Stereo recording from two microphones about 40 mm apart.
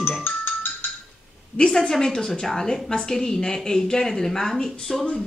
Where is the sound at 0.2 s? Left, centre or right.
Left.